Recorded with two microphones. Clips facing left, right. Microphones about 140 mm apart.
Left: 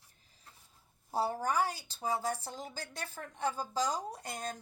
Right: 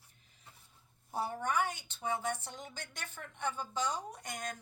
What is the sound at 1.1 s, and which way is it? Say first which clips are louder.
A woman's voice: left 3 dB; 35° left (ahead or behind).